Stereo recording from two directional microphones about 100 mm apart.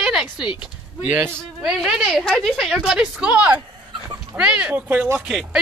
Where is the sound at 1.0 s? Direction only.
20° right (ahead or behind).